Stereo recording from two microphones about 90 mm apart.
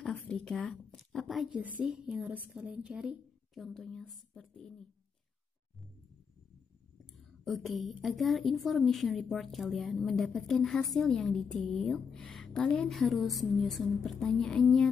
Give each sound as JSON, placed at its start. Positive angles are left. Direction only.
{"t": 0.0, "sound": "a sound", "side_deg": 10}
{"t": 1.5, "sound": "speech", "side_deg": -15}
{"t": 1.9, "sound": "speech", "side_deg": -5}
{"t": 2.2, "sound": "a woman's voice", "side_deg": -20}
{"t": 3.5, "sound": "a woman's voice", "side_deg": 5}
{"t": 7.2, "sound": "a woman's voice", "side_deg": 0}